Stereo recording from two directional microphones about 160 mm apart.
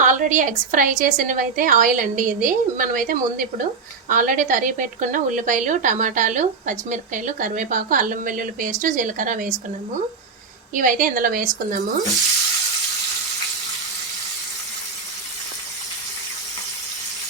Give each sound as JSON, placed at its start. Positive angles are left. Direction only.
{"t": 0.0, "sound": "a woman's voice", "side_deg": -55}
{"t": 10.8, "sound": "a woman's voice", "side_deg": -60}